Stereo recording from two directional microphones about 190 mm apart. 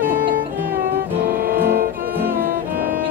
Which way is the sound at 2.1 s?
10° right (ahead or behind).